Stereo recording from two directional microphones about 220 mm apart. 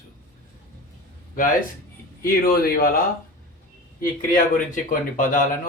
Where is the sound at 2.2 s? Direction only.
45° left (ahead or behind).